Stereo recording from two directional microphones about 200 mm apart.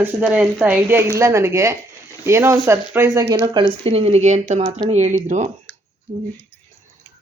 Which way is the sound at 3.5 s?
30° right (ahead or behind).